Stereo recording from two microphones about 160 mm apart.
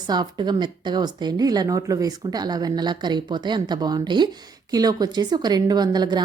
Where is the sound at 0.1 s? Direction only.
25° right (ahead or behind).